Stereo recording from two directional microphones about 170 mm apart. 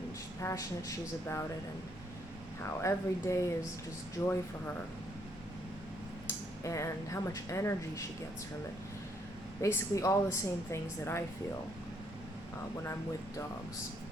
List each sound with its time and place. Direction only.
0.4 s speech: 20° left (ahead or behind)
2.6 s a woman's voice: 15° left (ahead or behind)
6.7 s a woman's voice: 15° left (ahead or behind)
9.6 s a woman's voice: 20° left (ahead or behind)